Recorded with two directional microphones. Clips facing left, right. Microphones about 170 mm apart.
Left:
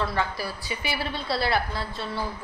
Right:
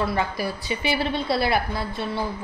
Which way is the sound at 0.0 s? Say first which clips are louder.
Right 3 dB; 15° right (ahead or behind).